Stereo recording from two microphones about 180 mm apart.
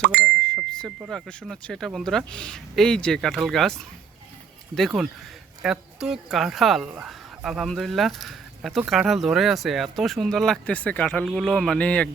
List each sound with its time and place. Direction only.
0.0 s speech: 60° right (ahead or behind)
0.4 s speech: 5° left (ahead or behind)